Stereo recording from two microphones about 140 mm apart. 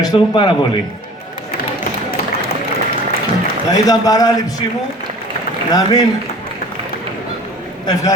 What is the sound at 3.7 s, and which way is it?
Speech, 25° left (ahead or behind).